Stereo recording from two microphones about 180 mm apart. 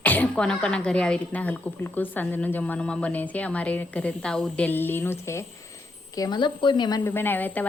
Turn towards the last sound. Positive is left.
turn(degrees=10)  # may be behind; listen again after turning